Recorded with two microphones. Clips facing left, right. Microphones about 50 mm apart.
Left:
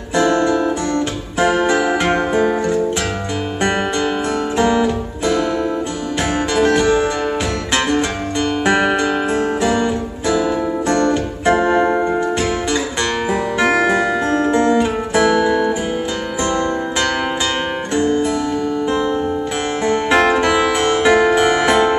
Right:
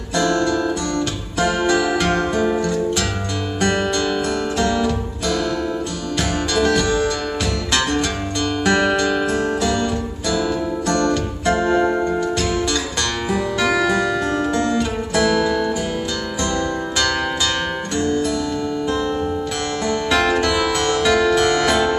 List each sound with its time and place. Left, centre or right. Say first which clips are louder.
0.1 s music: left 4 dB; left
3.6 s music: left 1 dB; centre
6.5 s music: left 4 dB; left
8.6 s music: left 1 dB; centre
10.9 s music: left 2 dB; left
13.3 s music: left 2 dB; left
17.9 s music: left 4 dB; left
19.9 s music: left 4 dB; left